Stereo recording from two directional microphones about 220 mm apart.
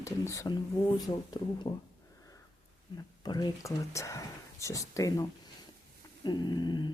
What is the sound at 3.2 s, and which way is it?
Speech, 20° left (ahead or behind).